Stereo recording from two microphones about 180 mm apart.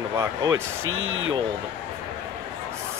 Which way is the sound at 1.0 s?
90° right.